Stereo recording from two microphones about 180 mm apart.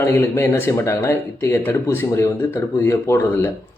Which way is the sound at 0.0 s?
15° left (ahead or behind).